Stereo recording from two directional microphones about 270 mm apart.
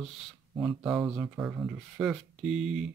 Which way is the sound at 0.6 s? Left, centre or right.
Centre.